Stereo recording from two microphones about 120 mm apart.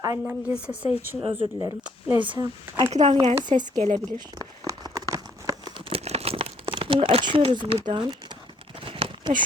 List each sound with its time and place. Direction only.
0.3 s a woman's voice: 10° right (ahead or behind)
1.2 s speech: 50° right (ahead or behind)
1.5 s speech: 25° right (ahead or behind)
2.1 s speech: 40° right (ahead or behind)
2.9 s speech: 60° right (ahead or behind)
3.2 s speech: 40° right (ahead or behind)
3.8 s speech: 80° right
4.4 s a sound: 30° right (ahead or behind)
5.7 s crumpling: 55° right (ahead or behind)
8.8 s a sound: 50° right (ahead or behind)